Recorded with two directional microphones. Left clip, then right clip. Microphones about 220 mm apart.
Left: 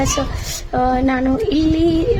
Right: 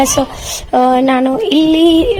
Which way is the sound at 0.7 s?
30° right (ahead or behind).